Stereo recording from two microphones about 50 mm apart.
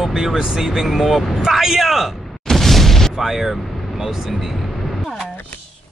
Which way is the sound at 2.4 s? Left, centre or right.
Centre.